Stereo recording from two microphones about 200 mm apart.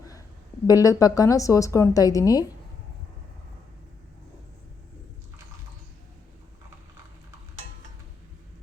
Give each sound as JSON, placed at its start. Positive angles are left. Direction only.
{"t": 0.7, "sound": "a woman's voice", "side_deg": 15}